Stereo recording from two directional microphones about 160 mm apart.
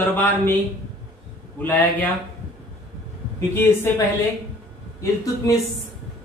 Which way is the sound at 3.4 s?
15° left (ahead or behind).